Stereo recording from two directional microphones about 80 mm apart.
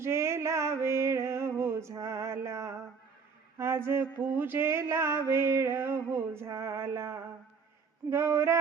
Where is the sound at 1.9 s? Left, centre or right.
Right.